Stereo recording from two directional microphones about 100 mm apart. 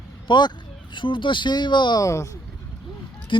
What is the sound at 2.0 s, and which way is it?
Speech, 30° left (ahead or behind).